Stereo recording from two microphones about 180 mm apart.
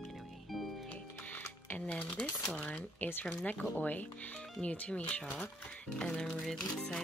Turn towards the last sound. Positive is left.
turn(degrees=5)  # may be behind; listen again after turning